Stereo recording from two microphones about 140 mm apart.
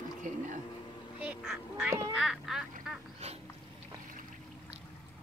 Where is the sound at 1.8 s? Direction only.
15° right (ahead or behind).